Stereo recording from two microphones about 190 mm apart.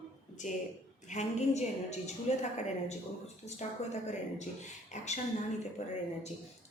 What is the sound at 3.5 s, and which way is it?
A woman's voice, 35° left (ahead or behind).